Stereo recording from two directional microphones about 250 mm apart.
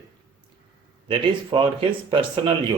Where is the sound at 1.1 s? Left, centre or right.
Centre.